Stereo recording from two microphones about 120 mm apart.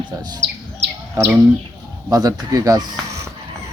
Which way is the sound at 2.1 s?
30° right (ahead or behind).